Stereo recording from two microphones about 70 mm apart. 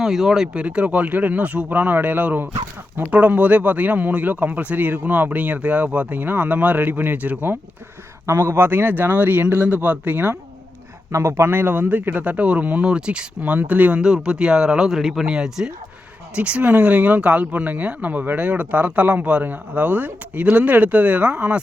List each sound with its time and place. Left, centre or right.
0.0 s speech: centre
0.4 s speech: centre
8.3 s speech: right
11.1 s speech: right
14.0 s speech: centre